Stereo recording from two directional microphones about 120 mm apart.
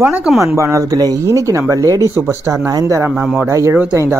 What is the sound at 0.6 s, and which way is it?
Speech, 25° right (ahead or behind).